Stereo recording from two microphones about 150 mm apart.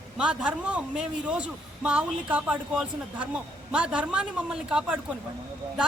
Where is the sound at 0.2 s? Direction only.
5° right (ahead or behind).